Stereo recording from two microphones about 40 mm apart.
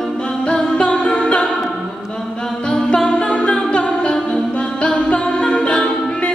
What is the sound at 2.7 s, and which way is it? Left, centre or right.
Music, left.